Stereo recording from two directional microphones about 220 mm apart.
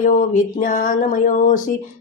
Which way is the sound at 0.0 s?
35° left (ahead or behind).